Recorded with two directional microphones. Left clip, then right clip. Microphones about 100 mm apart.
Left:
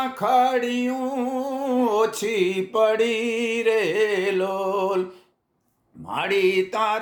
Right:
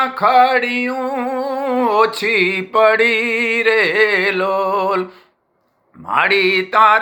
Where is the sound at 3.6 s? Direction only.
15° left (ahead or behind).